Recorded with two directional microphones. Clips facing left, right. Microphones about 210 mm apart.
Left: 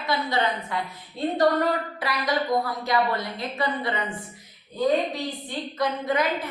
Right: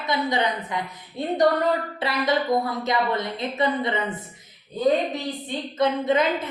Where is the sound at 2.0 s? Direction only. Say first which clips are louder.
Right 3 dB; 25° right (ahead or behind).